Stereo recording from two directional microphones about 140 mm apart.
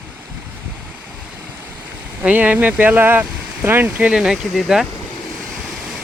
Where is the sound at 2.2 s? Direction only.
10° right (ahead or behind).